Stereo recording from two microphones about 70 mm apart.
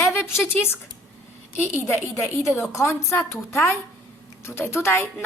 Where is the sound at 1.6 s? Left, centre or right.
Left.